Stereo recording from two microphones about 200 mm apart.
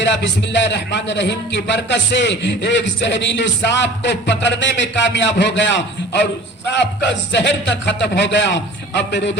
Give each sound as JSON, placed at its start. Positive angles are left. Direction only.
{"t": 0.0, "sound": "a man's voice", "side_deg": 60}
{"t": 7.6, "sound": "a man's voice", "side_deg": 65}